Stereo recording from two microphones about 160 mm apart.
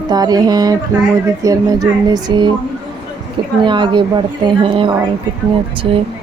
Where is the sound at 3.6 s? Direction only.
30° right (ahead or behind).